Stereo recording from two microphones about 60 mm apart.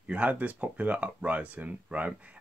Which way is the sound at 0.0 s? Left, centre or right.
Right.